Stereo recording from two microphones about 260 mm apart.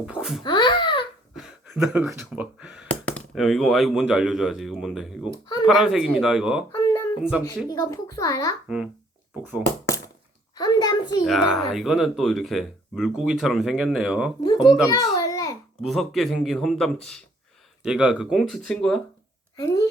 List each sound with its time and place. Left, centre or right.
0.0 s speech: centre
0.4 s babbling: centre
1.4 s speech: centre
6.7 s a sound: centre
7.2 s speech: centre
7.7 s a child's voice: centre
8.6 s speech: centre
10.5 s a sound: centre
11.3 s speech: centre
14.9 s a sound: centre
15.9 s a child's voice: centre